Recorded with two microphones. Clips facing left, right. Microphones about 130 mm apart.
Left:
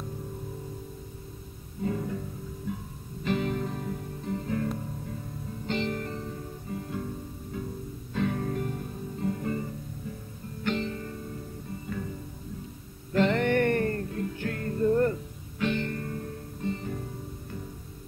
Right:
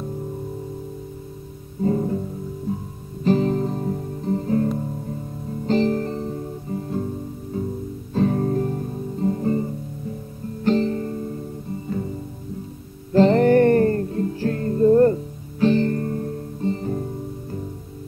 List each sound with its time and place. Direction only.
1.8 s music: 35° right (ahead or behind)
3.3 s guitar: 35° right (ahead or behind)
5.7 s music: 35° right (ahead or behind)
8.1 s guitar: 35° right (ahead or behind)
10.6 s music: 35° right (ahead or behind)
13.1 s music: 35° right (ahead or behind)